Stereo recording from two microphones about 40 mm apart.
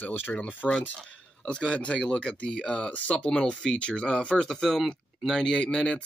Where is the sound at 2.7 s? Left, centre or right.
Left.